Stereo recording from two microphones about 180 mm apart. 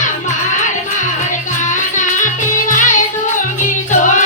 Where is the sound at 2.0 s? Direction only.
45° left (ahead or behind).